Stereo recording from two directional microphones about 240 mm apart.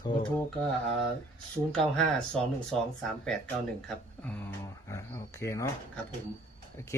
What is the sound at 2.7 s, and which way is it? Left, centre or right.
Speech, centre.